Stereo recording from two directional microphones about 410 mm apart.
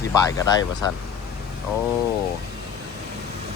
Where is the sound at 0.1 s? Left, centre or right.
Centre.